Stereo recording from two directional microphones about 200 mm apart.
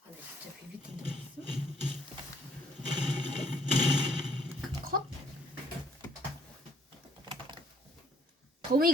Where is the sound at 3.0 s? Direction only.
Centre (ahead or behind).